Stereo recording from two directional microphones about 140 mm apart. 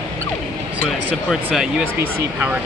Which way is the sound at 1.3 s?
5° right (ahead or behind).